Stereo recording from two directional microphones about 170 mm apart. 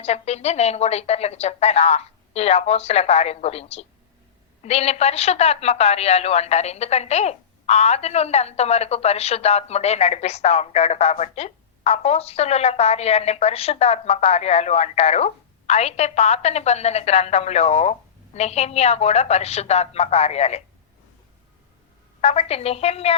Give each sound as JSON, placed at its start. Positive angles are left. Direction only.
{"t": 0.0, "sound": "a woman's voice", "side_deg": 40}
{"t": 22.2, "sound": "a woman's voice", "side_deg": 40}